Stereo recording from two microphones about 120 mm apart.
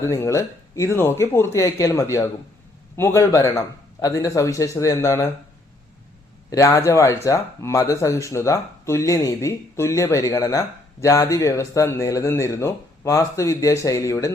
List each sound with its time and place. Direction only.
0.0 s speech: 25° left (ahead or behind)
6.5 s speech: 25° left (ahead or behind)